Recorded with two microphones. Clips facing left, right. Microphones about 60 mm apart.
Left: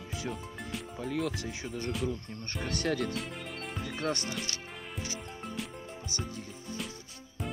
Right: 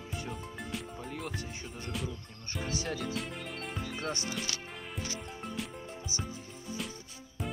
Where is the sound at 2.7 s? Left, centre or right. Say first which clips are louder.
Left 5 dB; left.